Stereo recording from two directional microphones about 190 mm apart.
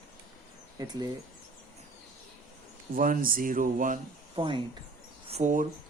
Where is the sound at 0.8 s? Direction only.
20° right (ahead or behind).